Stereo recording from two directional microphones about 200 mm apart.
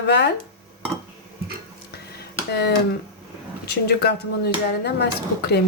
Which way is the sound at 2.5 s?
55° left (ahead or behind).